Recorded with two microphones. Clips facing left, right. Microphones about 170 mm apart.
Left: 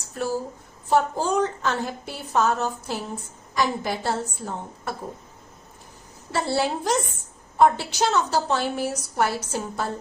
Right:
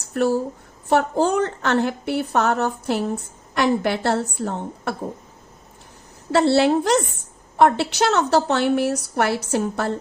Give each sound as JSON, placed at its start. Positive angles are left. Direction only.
{"t": 0.1, "sound": "a woman's voice", "side_deg": -65}
{"t": 6.3, "sound": "a woman's voice", "side_deg": -70}